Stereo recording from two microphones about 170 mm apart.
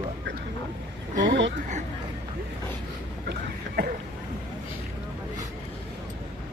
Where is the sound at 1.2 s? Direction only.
90° right.